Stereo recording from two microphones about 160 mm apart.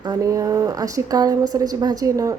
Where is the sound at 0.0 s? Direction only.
25° right (ahead or behind).